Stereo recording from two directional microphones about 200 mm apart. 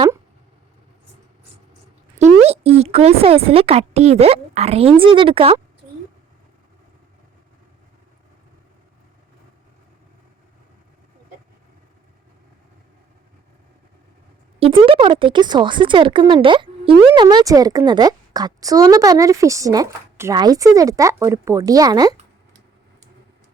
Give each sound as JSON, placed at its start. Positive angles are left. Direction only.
{"t": 2.1, "sound": "speech", "side_deg": -35}
{"t": 14.6, "sound": "speech", "side_deg": -25}